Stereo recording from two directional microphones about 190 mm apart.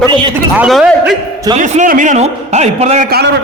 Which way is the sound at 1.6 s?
40° right (ahead or behind).